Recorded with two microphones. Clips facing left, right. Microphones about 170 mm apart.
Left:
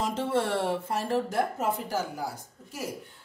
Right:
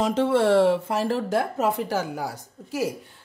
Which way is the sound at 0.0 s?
85° right.